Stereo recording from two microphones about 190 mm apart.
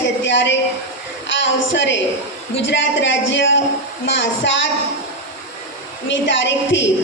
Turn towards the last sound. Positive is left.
turn(degrees=75)  # may be behind; listen again after turning